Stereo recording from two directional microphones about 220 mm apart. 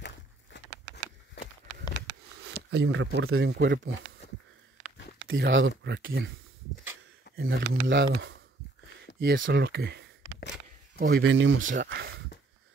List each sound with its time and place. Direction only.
1.4 s walk: 50° left (ahead or behind)
2.4 s speech: 50° right (ahead or behind)
5.3 s speech: 60° right (ahead or behind)
7.3 s speech: 60° right (ahead or behind)
11.8 s a sound: 45° right (ahead or behind)